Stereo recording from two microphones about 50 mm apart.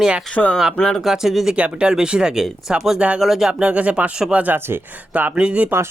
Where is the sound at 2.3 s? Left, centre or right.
Centre.